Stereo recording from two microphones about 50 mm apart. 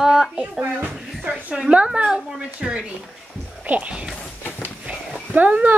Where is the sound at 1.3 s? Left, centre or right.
Centre.